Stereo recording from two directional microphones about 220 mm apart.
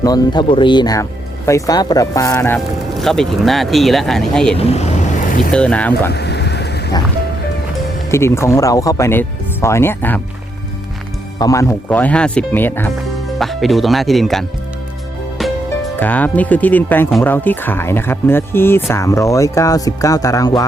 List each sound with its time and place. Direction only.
0.0 s speech: 20° left (ahead or behind)
3.0 s speech: centre (ahead or behind)
4.5 s speech: 25° left (ahead or behind)
5.5 s speech: 5° left (ahead or behind)
6.1 s a sound: 50° left (ahead or behind)
8.1 s speech: 10° left (ahead or behind)
11.3 s speech: 15° left (ahead or behind)
16.0 s speech: 10° left (ahead or behind)